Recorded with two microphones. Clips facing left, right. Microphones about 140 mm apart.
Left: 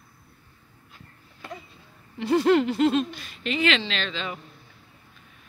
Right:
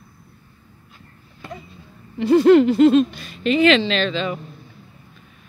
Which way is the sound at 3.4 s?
40° right (ahead or behind).